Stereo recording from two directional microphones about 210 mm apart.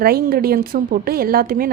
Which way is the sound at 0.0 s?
45° right (ahead or behind).